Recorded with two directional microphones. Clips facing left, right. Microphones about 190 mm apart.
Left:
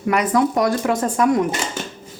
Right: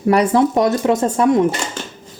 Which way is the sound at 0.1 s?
30° right (ahead or behind).